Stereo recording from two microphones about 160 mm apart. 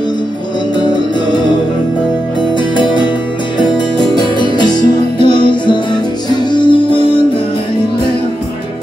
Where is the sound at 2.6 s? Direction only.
30° left (ahead or behind).